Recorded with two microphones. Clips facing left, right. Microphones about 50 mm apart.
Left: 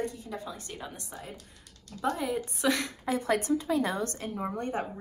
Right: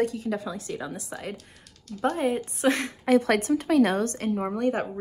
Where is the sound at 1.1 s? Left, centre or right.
Right.